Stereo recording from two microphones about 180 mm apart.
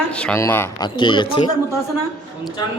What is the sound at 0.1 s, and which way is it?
Speech, 5° left (ahead or behind).